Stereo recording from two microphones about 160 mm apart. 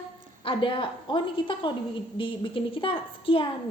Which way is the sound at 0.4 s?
35° left (ahead or behind).